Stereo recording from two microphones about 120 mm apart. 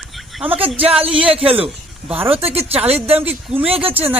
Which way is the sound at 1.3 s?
50° right (ahead or behind).